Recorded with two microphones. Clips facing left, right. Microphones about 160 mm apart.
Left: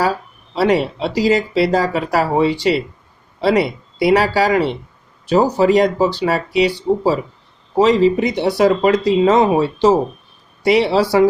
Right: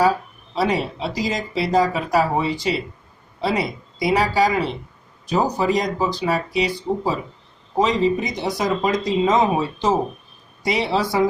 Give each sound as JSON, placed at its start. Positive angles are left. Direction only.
{"t": 0.5, "sound": "speech", "side_deg": 70}